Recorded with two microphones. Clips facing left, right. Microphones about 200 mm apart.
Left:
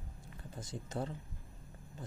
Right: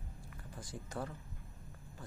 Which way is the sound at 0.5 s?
20° left (ahead or behind).